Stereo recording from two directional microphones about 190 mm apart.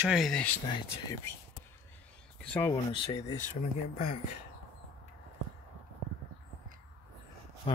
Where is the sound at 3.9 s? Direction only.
40° left (ahead or behind).